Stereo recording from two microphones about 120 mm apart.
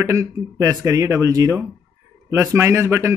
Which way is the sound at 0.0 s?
25° right (ahead or behind).